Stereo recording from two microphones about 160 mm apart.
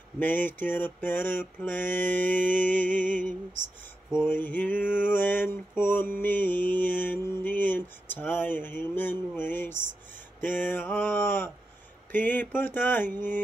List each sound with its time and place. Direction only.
0.2 s mantra: 10° left (ahead or behind)
3.0 s music: 55° right (ahead or behind)
4.3 s mantra: 10° left (ahead or behind)